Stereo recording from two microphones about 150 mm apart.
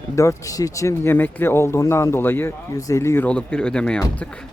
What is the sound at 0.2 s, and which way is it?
Speech, 20° left (ahead or behind).